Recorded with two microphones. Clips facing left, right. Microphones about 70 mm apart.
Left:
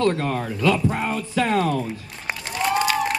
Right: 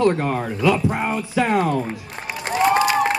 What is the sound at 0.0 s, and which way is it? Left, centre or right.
Speech, centre.